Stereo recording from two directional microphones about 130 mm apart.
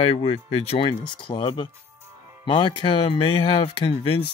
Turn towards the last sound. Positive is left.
turn(degrees=45)  # may be behind; listen again after turning